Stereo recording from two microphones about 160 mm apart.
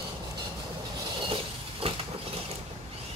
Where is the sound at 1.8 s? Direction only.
35° right (ahead or behind).